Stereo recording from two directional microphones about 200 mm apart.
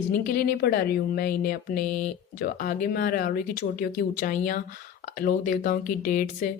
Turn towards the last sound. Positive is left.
turn(degrees=40)  # may be behind; listen again after turning